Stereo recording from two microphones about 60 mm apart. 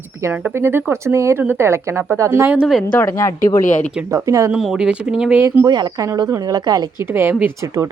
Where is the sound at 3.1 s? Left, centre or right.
Left.